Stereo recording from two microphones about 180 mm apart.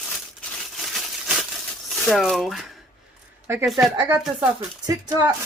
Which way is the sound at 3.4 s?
15° right (ahead or behind).